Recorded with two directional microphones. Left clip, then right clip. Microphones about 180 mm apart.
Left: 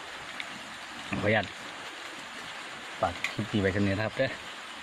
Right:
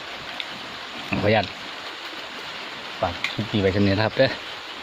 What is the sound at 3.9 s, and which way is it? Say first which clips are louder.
Speech: right 9 dB; 20° right (ahead or behind).